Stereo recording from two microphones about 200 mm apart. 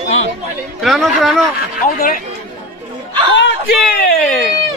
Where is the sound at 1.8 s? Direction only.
45° left (ahead or behind).